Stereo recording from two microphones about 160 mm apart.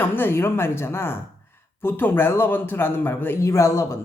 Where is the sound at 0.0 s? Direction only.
15° left (ahead or behind).